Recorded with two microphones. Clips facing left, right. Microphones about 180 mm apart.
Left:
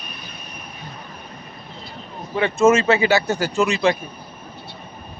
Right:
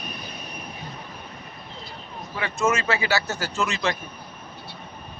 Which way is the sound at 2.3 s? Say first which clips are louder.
Left 9 dB; 25° left (ahead or behind).